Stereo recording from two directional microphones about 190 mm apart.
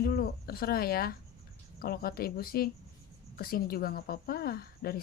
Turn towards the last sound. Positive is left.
turn(degrees=50)  # may be behind; listen again after turning